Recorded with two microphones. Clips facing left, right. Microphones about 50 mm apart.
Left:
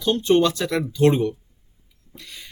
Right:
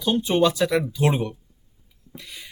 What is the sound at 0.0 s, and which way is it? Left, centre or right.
Speech, centre.